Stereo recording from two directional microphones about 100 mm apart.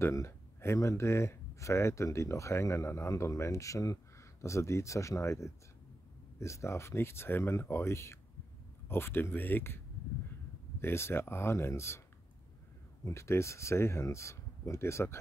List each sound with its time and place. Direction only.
0.0 s speech: 25° left (ahead or behind)
10.8 s speech: 25° left (ahead or behind)
13.0 s speech: 30° left (ahead or behind)